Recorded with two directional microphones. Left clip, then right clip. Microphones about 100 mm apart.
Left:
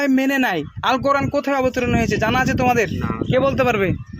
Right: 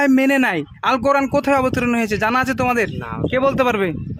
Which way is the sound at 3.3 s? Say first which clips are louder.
Even; 50° right (ahead or behind).